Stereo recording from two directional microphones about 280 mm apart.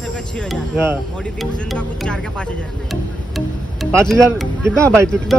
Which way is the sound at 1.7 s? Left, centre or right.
Centre.